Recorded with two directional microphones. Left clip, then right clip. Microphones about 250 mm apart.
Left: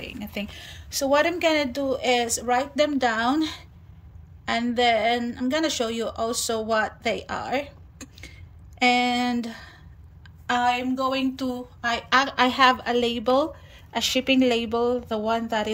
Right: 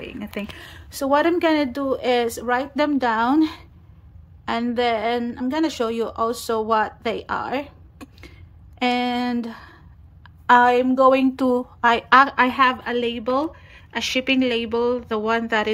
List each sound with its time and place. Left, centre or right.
0.6 s a woman's voice: centre
12.9 s a woman's voice: left